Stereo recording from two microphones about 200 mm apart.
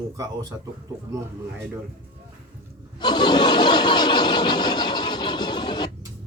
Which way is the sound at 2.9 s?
20° left (ahead or behind).